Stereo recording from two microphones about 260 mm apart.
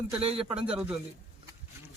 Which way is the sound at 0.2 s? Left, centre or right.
Right.